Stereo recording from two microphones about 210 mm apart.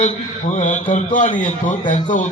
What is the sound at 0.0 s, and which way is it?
A man's voice, 35° left (ahead or behind).